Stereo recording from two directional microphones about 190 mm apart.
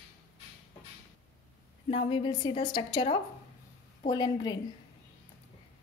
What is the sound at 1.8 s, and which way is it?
A woman's voice, 25° left (ahead or behind).